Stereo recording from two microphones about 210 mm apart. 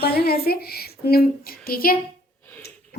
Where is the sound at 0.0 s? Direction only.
50° left (ahead or behind).